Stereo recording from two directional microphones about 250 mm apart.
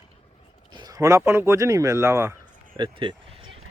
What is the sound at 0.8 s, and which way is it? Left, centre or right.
Speech, centre.